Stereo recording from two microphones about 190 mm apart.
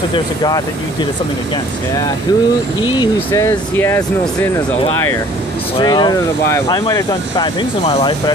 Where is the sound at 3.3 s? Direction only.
15° left (ahead or behind).